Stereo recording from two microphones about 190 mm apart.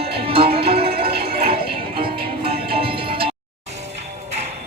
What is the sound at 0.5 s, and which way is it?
Music, 30° right (ahead or behind).